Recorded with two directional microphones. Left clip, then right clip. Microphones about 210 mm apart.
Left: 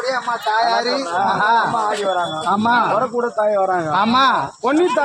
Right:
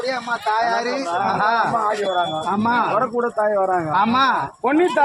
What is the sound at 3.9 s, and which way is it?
Speech, 40° left (ahead or behind).